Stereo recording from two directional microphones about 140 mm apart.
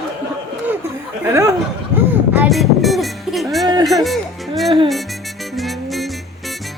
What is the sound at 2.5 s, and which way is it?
Music, centre (ahead or behind).